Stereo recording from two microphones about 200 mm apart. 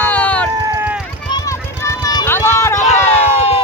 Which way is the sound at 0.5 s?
15° right (ahead or behind).